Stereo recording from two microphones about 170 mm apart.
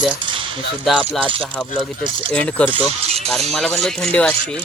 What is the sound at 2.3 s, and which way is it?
Speech, 5° left (ahead or behind).